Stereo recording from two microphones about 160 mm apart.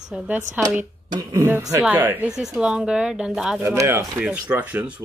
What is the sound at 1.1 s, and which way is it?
Speech, 15° right (ahead or behind).